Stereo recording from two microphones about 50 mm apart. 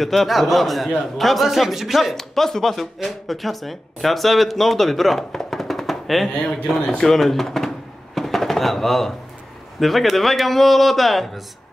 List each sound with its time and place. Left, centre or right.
0.0 s speech: centre
7.0 s a sound: centre
9.8 s speech: centre